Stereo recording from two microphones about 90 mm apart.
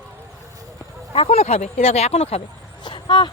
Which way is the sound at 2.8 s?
60° left (ahead or behind).